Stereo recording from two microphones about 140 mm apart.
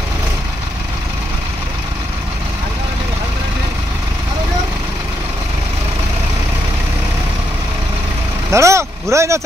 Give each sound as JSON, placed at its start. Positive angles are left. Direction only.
{"t": 8.5, "sound": "vehicle", "side_deg": -20}